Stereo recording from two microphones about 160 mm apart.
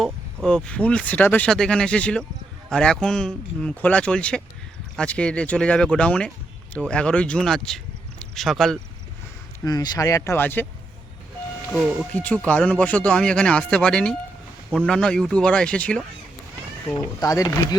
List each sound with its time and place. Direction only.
0.4 s speech: 5° left (ahead or behind)
9.6 s speech: 25° left (ahead or behind)
12.1 s speech: 10° left (ahead or behind)
16.9 s speech: 25° left (ahead or behind)